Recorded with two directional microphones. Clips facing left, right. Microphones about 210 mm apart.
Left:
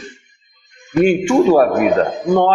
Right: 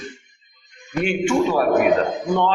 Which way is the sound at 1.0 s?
45° left (ahead or behind).